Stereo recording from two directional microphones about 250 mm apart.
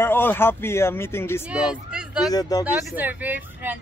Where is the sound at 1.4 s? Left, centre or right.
Centre.